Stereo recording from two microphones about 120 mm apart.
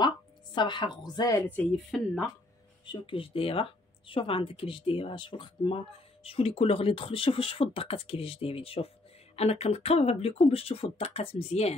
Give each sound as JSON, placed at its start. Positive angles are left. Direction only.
{"t": 0.6, "sound": "a woman's voice", "side_deg": 40}
{"t": 1.9, "sound": "speech", "side_deg": 0}
{"t": 2.8, "sound": "speech", "side_deg": 45}